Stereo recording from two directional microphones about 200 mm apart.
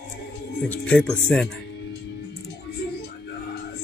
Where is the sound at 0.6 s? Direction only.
5° left (ahead or behind).